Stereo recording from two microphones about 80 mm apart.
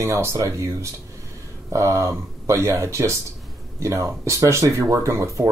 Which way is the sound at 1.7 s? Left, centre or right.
Right.